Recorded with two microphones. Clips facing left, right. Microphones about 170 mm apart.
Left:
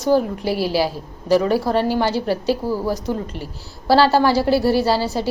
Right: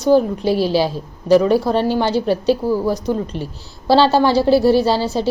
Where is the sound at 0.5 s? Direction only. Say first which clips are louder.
Right 2 dB; 10° left (ahead or behind).